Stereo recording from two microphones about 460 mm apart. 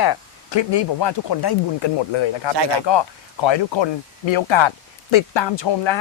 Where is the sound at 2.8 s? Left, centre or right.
Left.